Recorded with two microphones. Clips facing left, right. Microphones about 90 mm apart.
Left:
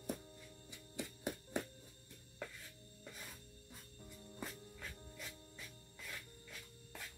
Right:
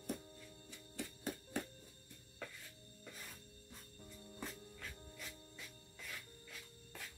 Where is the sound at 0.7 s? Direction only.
15° left (ahead or behind).